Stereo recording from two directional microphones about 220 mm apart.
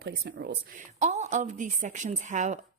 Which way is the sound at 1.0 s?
30° right (ahead or behind).